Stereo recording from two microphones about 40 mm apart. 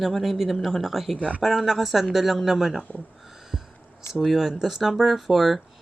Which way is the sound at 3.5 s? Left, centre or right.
Right.